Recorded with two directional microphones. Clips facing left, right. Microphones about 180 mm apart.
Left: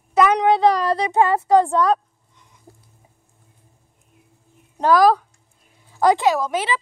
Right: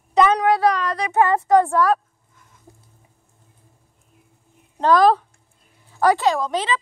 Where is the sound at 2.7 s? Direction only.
20° right (ahead or behind).